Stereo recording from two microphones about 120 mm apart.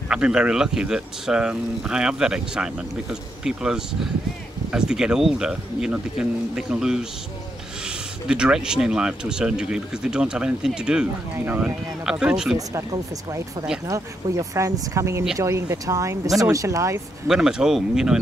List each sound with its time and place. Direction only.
0.1 s speech: 10° right (ahead or behind)
8.3 s speech: 5° right (ahead or behind)
12.5 s speech: 25° right (ahead or behind)
17.3 s speech: 5° right (ahead or behind)